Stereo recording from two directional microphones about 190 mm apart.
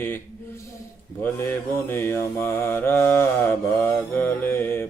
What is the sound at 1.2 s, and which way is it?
Mantra, 10° left (ahead or behind).